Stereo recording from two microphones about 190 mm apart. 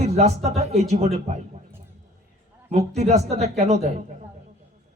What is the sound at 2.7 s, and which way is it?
A man's voice, 35° right (ahead or behind).